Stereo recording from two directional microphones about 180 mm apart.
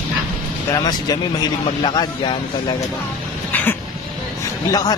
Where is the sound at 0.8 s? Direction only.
20° left (ahead or behind).